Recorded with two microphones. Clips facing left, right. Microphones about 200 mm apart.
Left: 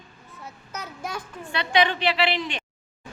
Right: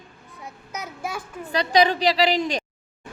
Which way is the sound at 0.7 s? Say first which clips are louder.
Right 2 dB; 10° right (ahead or behind).